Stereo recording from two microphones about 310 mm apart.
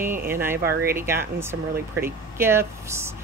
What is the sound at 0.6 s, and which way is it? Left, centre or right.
Speech, right.